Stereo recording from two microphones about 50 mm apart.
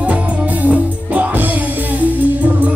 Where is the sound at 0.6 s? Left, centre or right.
Right.